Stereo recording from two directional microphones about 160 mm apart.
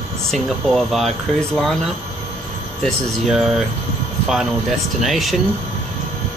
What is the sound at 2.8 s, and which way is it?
Speech, centre (ahead or behind).